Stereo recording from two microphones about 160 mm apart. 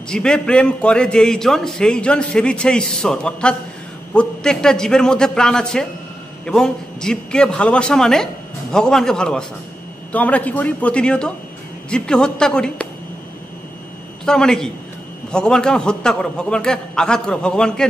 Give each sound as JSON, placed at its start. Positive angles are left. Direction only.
{"t": 0.1, "sound": "a man's voice", "side_deg": 5}
{"t": 14.2, "sound": "a man's voice", "side_deg": 5}